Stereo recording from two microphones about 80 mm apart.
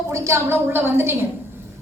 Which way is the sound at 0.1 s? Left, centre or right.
Right.